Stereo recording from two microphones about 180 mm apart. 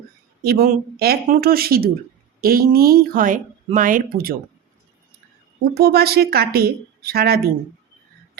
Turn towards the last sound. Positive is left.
turn(degrees=-60)  # may be behind; listen again after turning